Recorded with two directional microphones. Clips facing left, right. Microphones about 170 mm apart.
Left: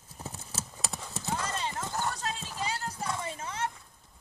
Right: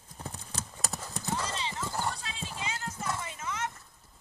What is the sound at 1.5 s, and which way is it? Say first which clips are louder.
Clip-clop: left 1 dB; 50° left (ahead or behind).